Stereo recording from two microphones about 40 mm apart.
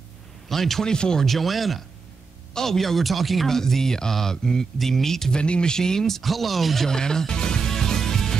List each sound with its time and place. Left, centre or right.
0.5 s speech: centre
0.9 s speech: centre
1.2 s speech: centre
3.4 s speech: centre
5.3 s speech: left; by 6.9 s centre
6.9 s music: centre